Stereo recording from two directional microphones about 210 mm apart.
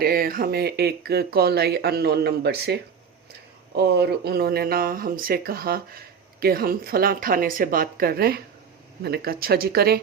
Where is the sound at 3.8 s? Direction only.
50° right (ahead or behind).